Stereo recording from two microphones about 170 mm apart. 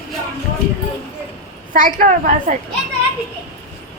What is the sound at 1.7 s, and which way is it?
Speech, 50° right (ahead or behind).